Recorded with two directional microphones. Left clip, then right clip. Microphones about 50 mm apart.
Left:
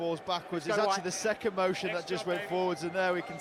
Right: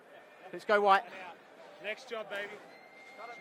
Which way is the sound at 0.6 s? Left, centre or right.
Right.